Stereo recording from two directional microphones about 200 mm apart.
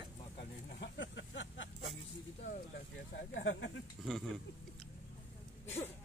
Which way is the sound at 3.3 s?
65° left (ahead or behind).